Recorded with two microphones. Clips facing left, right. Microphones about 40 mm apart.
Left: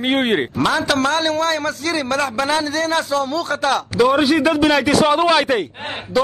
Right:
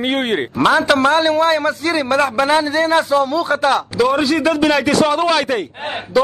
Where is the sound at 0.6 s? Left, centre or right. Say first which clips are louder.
Right 8 dB; centre.